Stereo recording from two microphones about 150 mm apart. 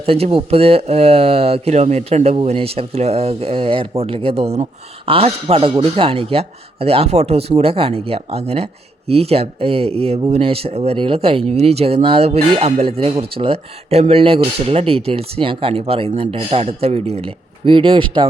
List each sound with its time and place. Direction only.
0.0 s speech: 40° right (ahead or behind)